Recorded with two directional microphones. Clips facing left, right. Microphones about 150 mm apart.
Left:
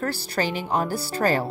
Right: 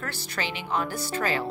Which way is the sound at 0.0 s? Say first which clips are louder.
Left 7 dB; 40° left (ahead or behind).